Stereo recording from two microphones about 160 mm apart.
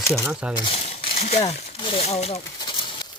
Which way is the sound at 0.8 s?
35° left (ahead or behind).